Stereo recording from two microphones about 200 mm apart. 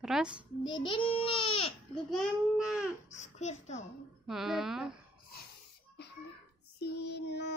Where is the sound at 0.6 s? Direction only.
25° left (ahead or behind).